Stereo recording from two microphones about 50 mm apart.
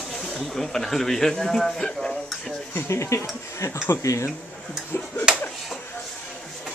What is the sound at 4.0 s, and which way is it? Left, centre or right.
Speech, left.